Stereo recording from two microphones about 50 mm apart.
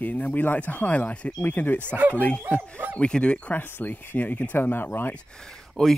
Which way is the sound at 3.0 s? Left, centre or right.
Centre.